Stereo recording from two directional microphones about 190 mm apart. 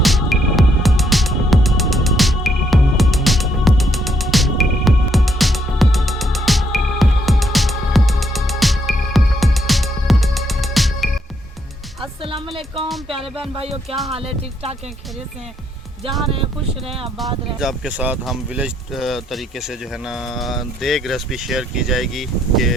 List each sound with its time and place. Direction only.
0.0 s music: centre (ahead or behind)
12.5 s music: 30° right (ahead or behind)
14.1 s speech: 30° right (ahead or behind)
16.0 s speech: centre (ahead or behind)
16.3 s speech: 30° right (ahead or behind)
17.2 s speech: centre (ahead or behind)